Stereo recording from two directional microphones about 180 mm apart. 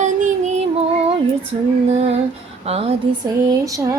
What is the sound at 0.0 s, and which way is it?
Child singing, 40° right (ahead or behind).